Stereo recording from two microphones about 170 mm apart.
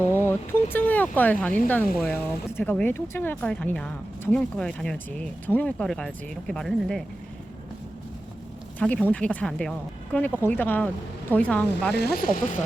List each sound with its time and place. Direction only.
0.0 s speech: 15° left (ahead or behind)
8.8 s speech: 5° left (ahead or behind)
11.9 s speech: 65° left (ahead or behind)